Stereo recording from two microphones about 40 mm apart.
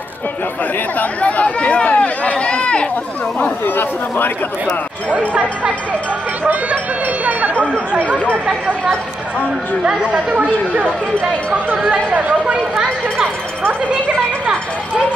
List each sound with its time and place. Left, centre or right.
0.9 s speech: left
3.6 s speech: left
6.4 s speech: right
7.2 s chatter: right
9.8 s speech: centre
11.9 s speech: right